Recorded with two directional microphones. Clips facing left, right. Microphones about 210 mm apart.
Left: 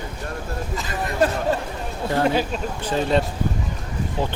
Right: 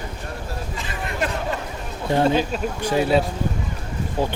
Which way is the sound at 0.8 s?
40° left (ahead or behind).